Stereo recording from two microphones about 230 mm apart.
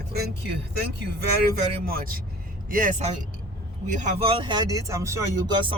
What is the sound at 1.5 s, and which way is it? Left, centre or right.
A man's voice, right.